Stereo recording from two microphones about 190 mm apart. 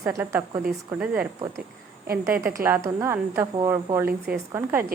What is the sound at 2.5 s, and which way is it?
A woman's voice, 15° right (ahead or behind).